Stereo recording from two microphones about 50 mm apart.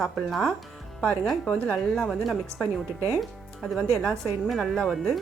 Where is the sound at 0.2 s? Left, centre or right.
Centre.